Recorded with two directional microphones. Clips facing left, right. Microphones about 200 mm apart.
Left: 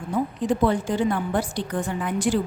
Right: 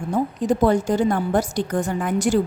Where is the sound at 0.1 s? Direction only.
45° right (ahead or behind).